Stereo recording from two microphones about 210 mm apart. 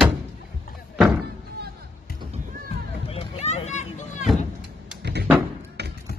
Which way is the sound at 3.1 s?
30° left (ahead or behind).